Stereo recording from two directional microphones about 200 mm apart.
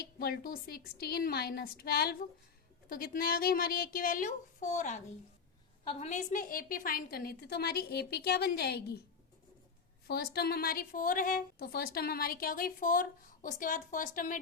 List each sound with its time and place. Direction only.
0.0 s a woman's voice: 50° left (ahead or behind)
10.1 s a woman's voice: 50° left (ahead or behind)